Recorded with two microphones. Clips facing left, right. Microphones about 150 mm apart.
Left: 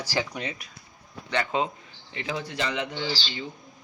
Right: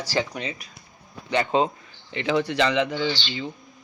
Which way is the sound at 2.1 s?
80° right.